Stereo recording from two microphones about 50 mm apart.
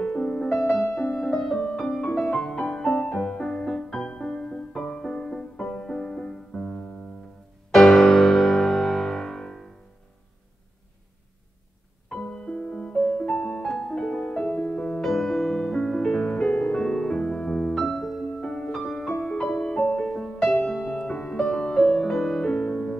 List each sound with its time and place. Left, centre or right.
0.0 s music: centre
7.7 s music: centre
12.2 s music: left
13.3 s music: centre
14.2 s music: left
15.0 s music: centre; by 16.8 s left
16.8 s music: centre
18.3 s music: centre
21.0 s music: centre